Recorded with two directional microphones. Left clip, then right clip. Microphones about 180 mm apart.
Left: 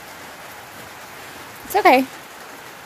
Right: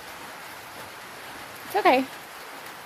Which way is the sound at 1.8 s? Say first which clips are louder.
Left 6 dB; 35° left (ahead or behind).